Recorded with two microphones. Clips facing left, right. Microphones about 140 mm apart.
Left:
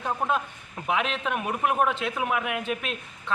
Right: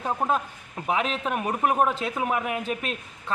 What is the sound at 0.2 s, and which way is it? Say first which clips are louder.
A man's voice: right 1 dB; 30° right (ahead or behind).